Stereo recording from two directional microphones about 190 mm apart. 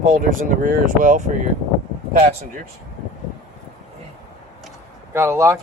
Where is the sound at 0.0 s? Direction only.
45° right (ahead or behind).